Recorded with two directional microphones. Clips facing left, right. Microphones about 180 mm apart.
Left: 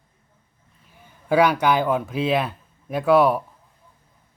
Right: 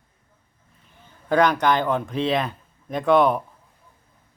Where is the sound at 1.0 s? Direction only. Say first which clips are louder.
Left 1 dB; 10° left (ahead or behind).